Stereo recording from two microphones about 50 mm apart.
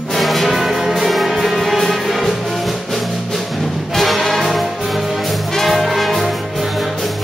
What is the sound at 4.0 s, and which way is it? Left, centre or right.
Music, centre.